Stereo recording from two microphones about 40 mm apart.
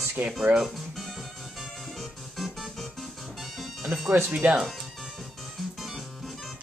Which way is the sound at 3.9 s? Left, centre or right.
Right.